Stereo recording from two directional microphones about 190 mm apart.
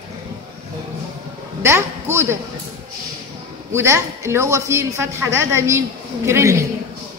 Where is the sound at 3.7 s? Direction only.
15° right (ahead or behind).